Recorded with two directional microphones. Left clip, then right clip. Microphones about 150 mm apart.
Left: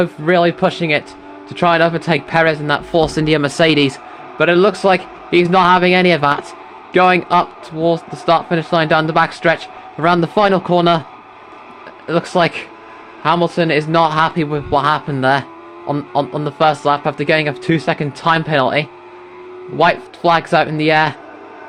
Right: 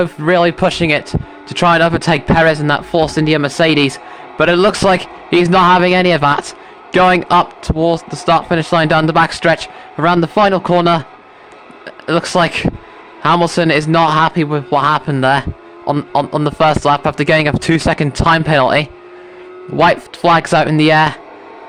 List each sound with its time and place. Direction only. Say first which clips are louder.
0.0 s a man's voice: right 1 dB; 35° right (ahead or behind)
2.7 s speech: right 1 dB; 20° right (ahead or behind)
4.4 s a man's voice: right 1 dB; 40° right (ahead or behind)
10.0 s speech: right 2 dB; 25° right (ahead or behind)
12.0 s a man's voice: right 2 dB; 40° right (ahead or behind)
13.2 s a man's voice: right 3 dB; 50° right (ahead or behind)